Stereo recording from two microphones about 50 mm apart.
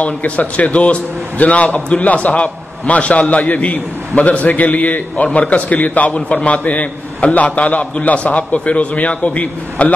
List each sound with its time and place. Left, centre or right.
0.0 s a man's voice: left